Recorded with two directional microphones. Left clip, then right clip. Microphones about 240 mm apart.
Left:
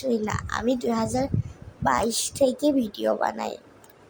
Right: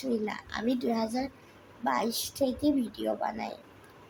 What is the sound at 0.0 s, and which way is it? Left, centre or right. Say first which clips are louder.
A child's voice: left 6 dB; left.